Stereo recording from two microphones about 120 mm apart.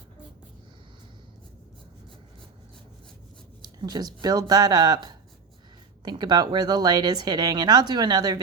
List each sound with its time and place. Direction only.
3.8 s speech: 35° right (ahead or behind)